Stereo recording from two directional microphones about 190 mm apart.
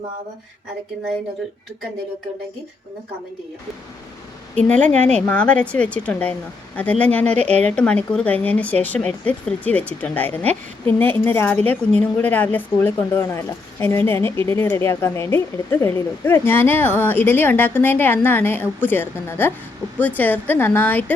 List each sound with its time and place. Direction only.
4.5 s a woman's voice: 5° left (ahead or behind)
4.9 s a woman's voice: 35° right (ahead or behind)
5.2 s a woman's voice: 5° left (ahead or behind)